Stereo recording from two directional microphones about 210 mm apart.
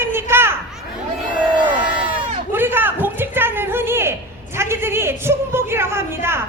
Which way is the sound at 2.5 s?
10° right (ahead or behind).